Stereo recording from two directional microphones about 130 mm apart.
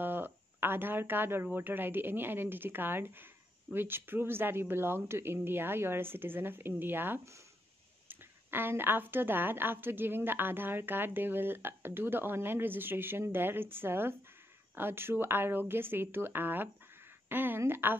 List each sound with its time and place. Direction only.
0.0 s a woman's voice: 15° right (ahead or behind)